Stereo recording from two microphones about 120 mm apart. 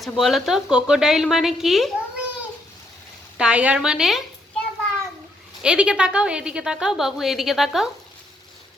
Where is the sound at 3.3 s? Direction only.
10° right (ahead or behind).